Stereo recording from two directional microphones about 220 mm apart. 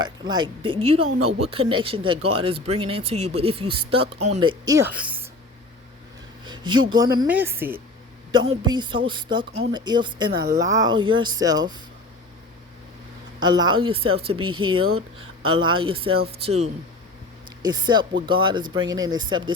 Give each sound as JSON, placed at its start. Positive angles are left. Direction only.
{"t": 0.0, "sound": "speech", "side_deg": -20}
{"t": 6.4, "sound": "speech", "side_deg": -20}
{"t": 7.3, "sound": "a woman's voice", "side_deg": -10}
{"t": 13.4, "sound": "speech", "side_deg": -20}
{"t": 14.5, "sound": "speech", "side_deg": -70}
{"t": 15.7, "sound": "speech", "side_deg": -25}